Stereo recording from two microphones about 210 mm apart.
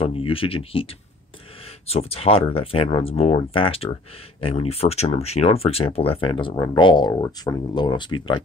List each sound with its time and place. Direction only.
0.0 s speech: 25° left (ahead or behind)
1.9 s speech: 30° left (ahead or behind)